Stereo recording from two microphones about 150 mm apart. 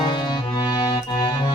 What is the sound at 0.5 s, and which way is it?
Music, 30° left (ahead or behind).